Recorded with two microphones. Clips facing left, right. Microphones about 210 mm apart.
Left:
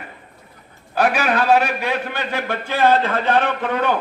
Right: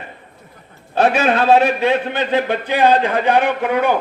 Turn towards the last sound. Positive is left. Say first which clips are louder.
# right 4 dB
turn(degrees=-10)  # may be behind; listen again after turning